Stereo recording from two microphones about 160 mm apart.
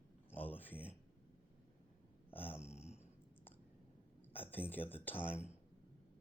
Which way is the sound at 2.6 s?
40° left (ahead or behind).